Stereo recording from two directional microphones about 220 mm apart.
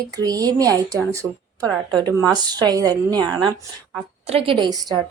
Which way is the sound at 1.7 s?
5° left (ahead or behind).